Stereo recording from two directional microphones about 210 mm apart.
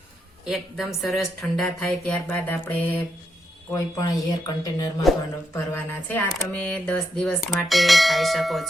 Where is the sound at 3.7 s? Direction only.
15° left (ahead or behind).